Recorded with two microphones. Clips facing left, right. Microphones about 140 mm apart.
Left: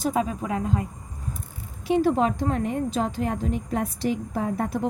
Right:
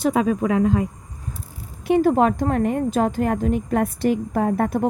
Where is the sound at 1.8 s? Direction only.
55° right (ahead or behind).